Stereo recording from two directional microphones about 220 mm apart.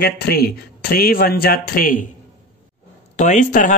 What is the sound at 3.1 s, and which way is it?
Speech, 35° left (ahead or behind).